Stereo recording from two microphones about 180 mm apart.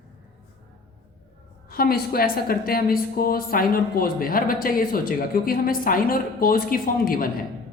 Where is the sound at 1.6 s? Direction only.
55° left (ahead or behind).